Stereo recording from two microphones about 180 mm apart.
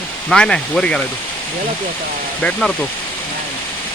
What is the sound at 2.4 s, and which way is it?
Speech, 5° left (ahead or behind).